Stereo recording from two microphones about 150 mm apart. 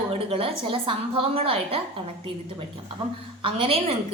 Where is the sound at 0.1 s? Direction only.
40° right (ahead or behind).